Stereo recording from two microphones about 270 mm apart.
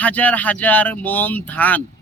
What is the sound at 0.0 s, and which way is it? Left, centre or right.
Speech, centre.